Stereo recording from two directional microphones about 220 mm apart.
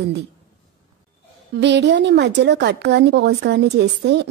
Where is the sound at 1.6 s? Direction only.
50° right (ahead or behind).